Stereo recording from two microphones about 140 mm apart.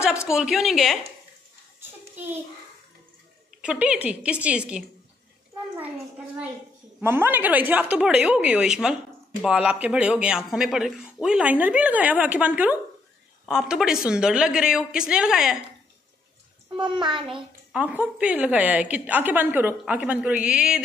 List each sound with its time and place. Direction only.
0.3 s a woman's voice: 5° right (ahead or behind)
1.8 s a sound: 15° right (ahead or behind)
3.6 s a woman's voice: 10° right (ahead or behind)
7.0 s a woman's voice: 15° right (ahead or behind)
16.8 s a child's voice: 35° right (ahead or behind)
17.3 s a woman's voice: 10° right (ahead or behind)